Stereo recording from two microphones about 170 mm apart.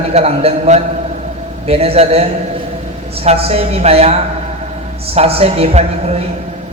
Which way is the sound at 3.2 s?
35° right (ahead or behind).